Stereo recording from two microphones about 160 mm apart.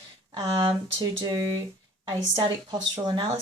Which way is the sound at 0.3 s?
25° right (ahead or behind).